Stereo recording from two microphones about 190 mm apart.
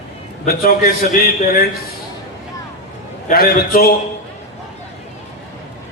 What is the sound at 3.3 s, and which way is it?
Speech, 50° left (ahead or behind).